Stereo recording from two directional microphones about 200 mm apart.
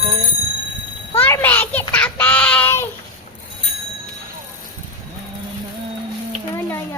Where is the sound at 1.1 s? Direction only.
10° left (ahead or behind).